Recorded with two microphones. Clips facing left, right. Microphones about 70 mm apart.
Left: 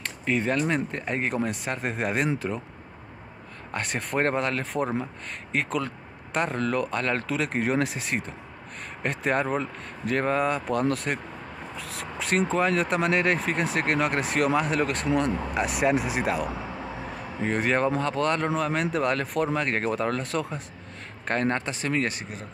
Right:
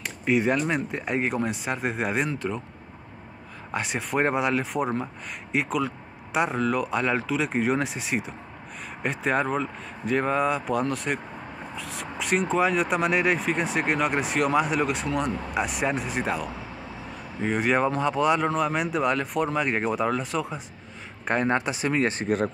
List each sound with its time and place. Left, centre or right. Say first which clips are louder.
0.0 s speech: right 3 dB; centre
3.7 s speech: right 1 dB; centre
17.5 s speech: right 1 dB; centre
21.3 s speech: right 2 dB; centre